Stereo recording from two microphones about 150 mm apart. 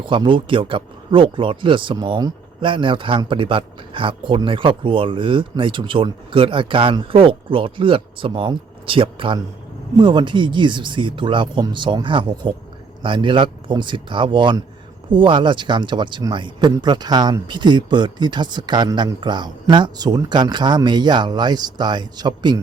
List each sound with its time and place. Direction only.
0.0 s speech: 35° right (ahead or behind)